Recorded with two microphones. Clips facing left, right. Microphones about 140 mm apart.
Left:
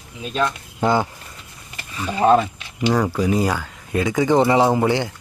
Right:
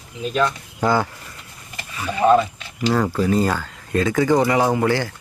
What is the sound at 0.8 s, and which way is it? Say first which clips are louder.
Speech: even; 20° left (ahead or behind).